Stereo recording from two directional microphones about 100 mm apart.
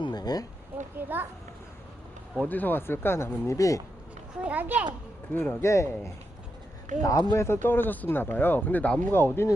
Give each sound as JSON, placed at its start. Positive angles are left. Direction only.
{"t": 0.0, "sound": "a sound", "side_deg": 45}
{"t": 0.9, "sound": "a sound", "side_deg": -20}
{"t": 2.4, "sound": "speech", "side_deg": 20}
{"t": 4.4, "sound": "a child's voice", "side_deg": -15}
{"t": 5.3, "sound": "a man's voice", "side_deg": 15}
{"t": 5.6, "sound": "speech", "side_deg": 30}
{"t": 7.0, "sound": "speech", "side_deg": 35}
{"t": 7.4, "sound": "speech", "side_deg": 20}